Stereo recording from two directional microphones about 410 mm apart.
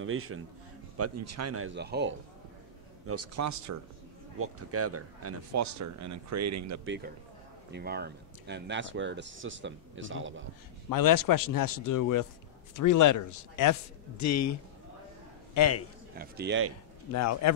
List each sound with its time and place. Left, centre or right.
0.0 s speech: right
3.1 s speech: right
7.7 s speech: right
10.9 s a man's voice: left
16.2 s speech: right
17.1 s speech: left